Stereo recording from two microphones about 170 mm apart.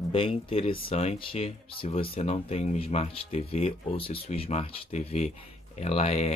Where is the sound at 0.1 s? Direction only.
30° left (ahead or behind).